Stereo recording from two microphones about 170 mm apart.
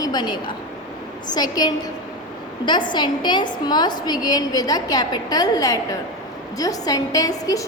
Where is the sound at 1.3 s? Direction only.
25° left (ahead or behind).